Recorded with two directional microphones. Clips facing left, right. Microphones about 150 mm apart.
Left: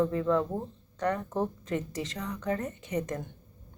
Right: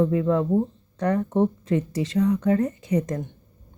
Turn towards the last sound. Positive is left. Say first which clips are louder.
# right 8 dB
turn(degrees=-35)  # may be behind; listen again after turning